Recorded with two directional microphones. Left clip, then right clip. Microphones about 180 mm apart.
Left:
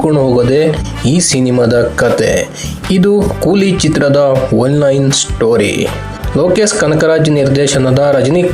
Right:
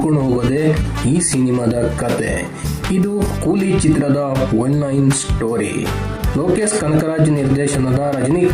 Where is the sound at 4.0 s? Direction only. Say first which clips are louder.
Left 9 dB; 20° left (ahead or behind).